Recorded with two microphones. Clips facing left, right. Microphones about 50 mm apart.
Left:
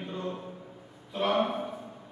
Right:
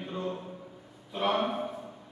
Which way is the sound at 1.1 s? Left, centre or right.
Centre.